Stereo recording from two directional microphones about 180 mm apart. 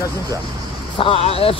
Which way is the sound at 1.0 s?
30° left (ahead or behind).